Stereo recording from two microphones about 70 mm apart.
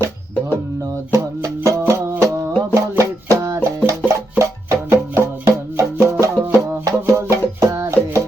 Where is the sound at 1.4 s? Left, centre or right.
Right.